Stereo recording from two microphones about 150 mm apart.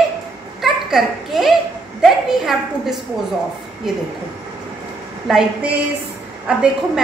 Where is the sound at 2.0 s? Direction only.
Centre (ahead or behind).